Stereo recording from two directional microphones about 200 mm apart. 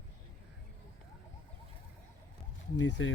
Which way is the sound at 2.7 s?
65° left (ahead or behind).